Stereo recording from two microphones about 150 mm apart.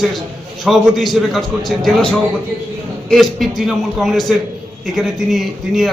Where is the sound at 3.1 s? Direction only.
Centre (ahead or behind).